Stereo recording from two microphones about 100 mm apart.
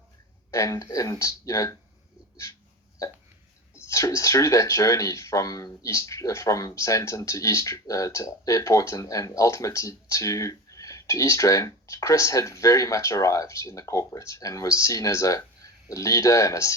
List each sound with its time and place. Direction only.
0.5 s speech: 30° left (ahead or behind)
3.8 s speech: 30° left (ahead or behind)